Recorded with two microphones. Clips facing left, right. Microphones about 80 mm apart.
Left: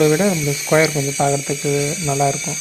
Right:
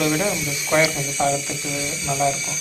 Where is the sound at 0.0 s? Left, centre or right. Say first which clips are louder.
Left 7 dB; left.